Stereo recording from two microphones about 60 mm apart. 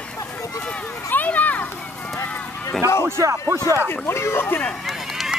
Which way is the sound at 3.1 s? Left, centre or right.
Right.